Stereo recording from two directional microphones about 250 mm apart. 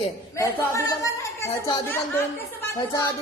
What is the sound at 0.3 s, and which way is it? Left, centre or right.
A woman's voice, centre.